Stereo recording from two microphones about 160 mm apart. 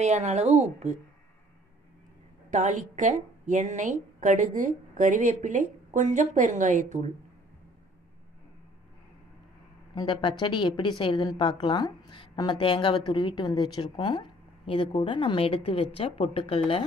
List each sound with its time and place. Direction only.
0.0 s a woman's voice: 45° right (ahead or behind)
2.5 s a woman's voice: 50° right (ahead or behind)
9.9 s a woman's voice: 30° left (ahead or behind)